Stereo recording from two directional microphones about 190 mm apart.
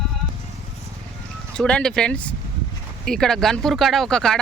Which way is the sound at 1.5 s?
5° left (ahead or behind).